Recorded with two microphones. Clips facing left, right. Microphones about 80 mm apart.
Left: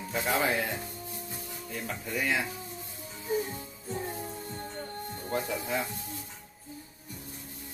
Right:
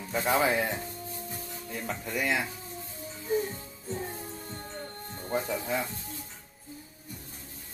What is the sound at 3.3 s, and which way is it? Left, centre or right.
Music, centre.